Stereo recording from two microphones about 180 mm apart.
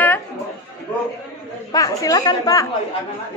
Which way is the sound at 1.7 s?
20° left (ahead or behind).